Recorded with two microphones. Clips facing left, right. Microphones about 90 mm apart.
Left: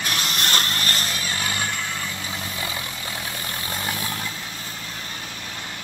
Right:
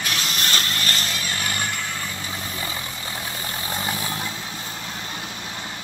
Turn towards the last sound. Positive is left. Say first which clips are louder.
# right 1 dB
turn(degrees=-10)  # may be behind; listen again after turning